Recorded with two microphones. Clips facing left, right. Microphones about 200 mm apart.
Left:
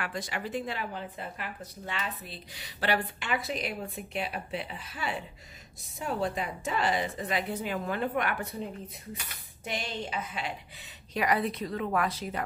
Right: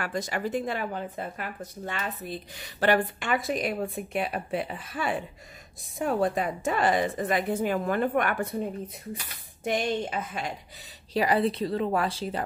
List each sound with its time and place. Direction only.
0.0 s speech: 45° right (ahead or behind)
9.7 s speech: 50° right (ahead or behind)
11.1 s a woman's voice: 30° right (ahead or behind)